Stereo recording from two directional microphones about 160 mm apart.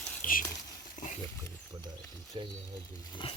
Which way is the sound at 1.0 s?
50° left (ahead or behind).